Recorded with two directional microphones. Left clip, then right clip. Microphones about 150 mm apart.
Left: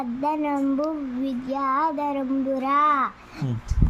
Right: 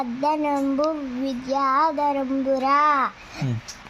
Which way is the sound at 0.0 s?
5° right (ahead or behind).